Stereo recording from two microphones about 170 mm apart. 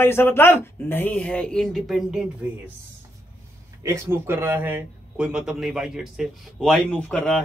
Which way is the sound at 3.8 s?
15° right (ahead or behind).